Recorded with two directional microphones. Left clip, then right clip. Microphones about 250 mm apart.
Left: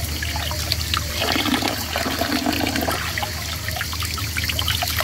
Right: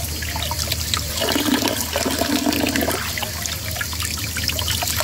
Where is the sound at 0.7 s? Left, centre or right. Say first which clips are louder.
Even; right.